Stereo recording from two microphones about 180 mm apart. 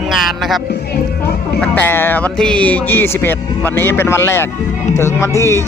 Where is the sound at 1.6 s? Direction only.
10° left (ahead or behind).